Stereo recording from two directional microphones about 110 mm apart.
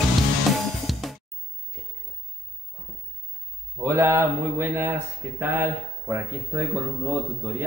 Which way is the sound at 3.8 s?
25° right (ahead or behind).